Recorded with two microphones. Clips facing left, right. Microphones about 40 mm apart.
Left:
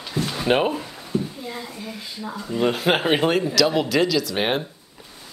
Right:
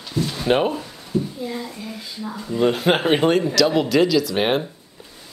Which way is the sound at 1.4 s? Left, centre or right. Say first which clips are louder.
Right 4 dB; centre.